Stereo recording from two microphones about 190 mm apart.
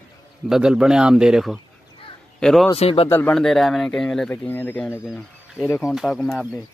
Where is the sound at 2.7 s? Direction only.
30° left (ahead or behind).